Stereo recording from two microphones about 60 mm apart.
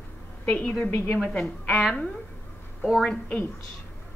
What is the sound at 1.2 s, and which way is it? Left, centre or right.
Speech, centre.